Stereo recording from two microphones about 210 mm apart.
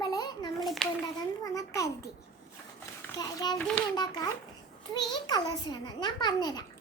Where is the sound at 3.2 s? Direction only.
15° left (ahead or behind).